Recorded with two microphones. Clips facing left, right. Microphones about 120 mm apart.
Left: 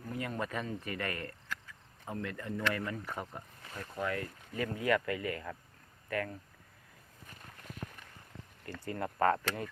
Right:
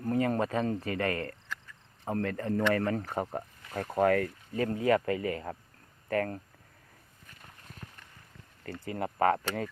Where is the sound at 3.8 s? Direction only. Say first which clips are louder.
Right 11 dB; 65° right (ahead or behind).